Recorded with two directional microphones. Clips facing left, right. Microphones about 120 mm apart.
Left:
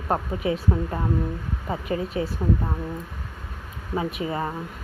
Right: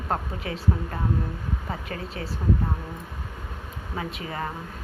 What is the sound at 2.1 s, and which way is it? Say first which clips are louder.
Speech: left 8 dB; 25° left (ahead or behind).